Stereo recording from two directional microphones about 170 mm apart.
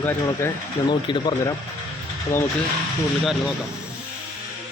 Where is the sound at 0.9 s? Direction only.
25° left (ahead or behind).